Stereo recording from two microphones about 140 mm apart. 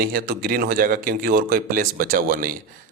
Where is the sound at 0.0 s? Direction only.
90° right.